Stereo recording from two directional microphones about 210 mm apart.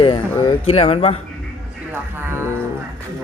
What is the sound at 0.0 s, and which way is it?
Speech, 25° left (ahead or behind).